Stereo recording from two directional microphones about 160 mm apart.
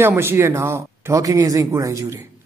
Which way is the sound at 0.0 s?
15° right (ahead or behind).